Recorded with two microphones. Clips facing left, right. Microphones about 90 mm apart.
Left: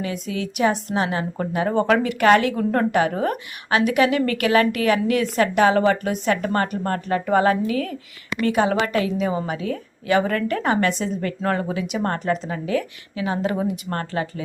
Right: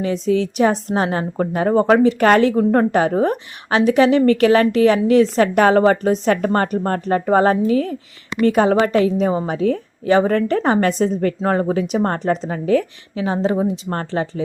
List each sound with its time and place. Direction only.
0.0 s a woman's voice: 35° right (ahead or behind)
11.3 s speech: 30° right (ahead or behind)
11.7 s a woman's voice: 40° right (ahead or behind)